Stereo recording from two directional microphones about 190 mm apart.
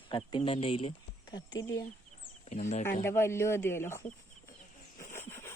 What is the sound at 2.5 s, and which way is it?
Speech, 35° left (ahead or behind).